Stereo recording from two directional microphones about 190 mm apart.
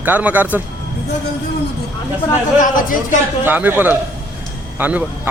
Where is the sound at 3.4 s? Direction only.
10° right (ahead or behind).